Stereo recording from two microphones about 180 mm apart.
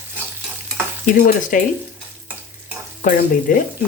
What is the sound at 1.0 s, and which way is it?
Speech, 45° left (ahead or behind).